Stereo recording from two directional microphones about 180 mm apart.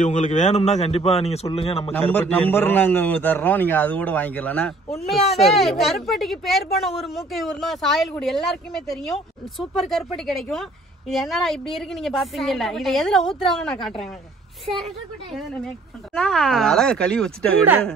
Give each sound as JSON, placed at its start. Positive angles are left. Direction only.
{"t": 0.0, "sound": "a man's voice", "side_deg": 40}
{"t": 1.9, "sound": "a man's voice", "side_deg": 10}
{"t": 16.2, "sound": "speech", "side_deg": 0}